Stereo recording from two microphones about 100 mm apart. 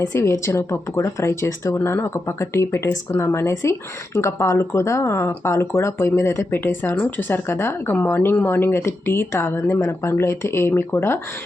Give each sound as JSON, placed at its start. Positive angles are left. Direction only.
{"t": 0.0, "sound": "speech", "side_deg": 30}